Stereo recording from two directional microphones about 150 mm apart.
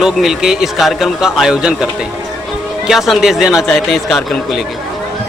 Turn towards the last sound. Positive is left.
turn(degrees=0)  # may be behind; listen again after turning